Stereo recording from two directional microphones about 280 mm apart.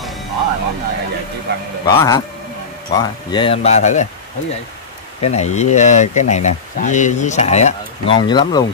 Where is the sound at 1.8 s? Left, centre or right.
Centre.